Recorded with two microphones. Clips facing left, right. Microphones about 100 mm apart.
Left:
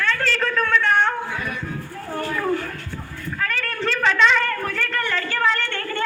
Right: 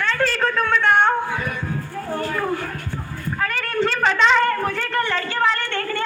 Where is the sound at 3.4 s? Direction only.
20° right (ahead or behind).